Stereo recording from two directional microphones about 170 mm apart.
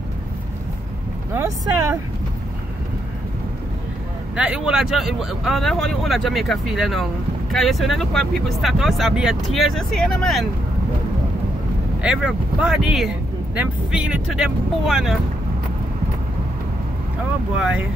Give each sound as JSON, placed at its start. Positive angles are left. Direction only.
{"t": 1.3, "sound": "speech", "side_deg": -15}
{"t": 4.4, "sound": "speech", "side_deg": -5}
{"t": 12.0, "sound": "speech", "side_deg": -5}
{"t": 17.6, "sound": "speech", "side_deg": -5}